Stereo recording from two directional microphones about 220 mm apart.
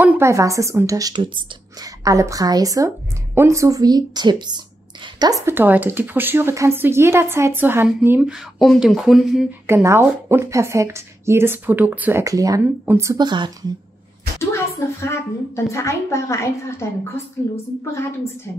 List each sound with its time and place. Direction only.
0.0 s speech: 15° right (ahead or behind)
14.5 s a woman's voice: 10° left (ahead or behind)